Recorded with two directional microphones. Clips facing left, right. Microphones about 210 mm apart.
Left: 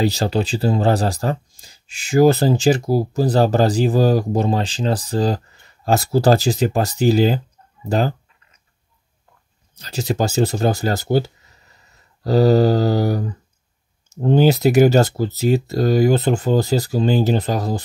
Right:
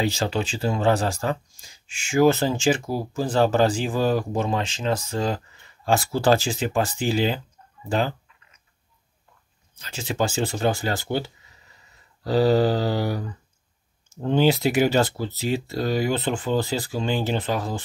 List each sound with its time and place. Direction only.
0.0 s speech: 35° left (ahead or behind)
9.8 s speech: 40° left (ahead or behind)